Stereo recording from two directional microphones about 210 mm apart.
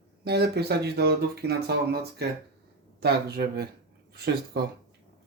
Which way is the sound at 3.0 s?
50° right (ahead or behind).